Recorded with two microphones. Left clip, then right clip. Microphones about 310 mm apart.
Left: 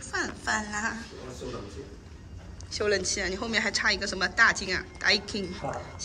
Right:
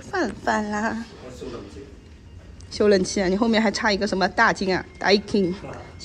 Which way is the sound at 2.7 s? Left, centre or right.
Centre.